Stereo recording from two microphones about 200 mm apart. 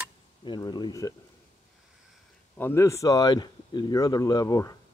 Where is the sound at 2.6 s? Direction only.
15° left (ahead or behind).